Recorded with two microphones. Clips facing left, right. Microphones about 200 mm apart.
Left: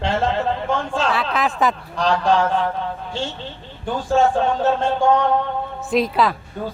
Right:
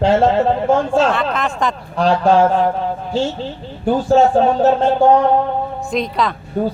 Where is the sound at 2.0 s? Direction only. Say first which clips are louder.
Right 5 dB; 40° right (ahead or behind).